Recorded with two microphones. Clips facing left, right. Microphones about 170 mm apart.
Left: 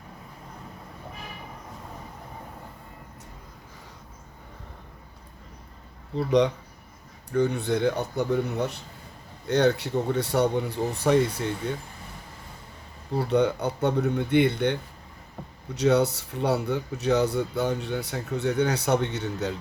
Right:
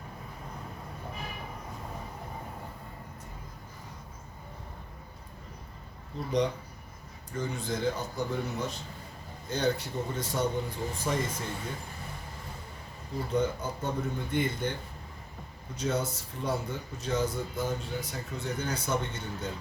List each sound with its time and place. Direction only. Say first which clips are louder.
6.1 s speech: left 7 dB; 70° left (ahead or behind)
13.1 s speech: left 7 dB; 70° left (ahead or behind)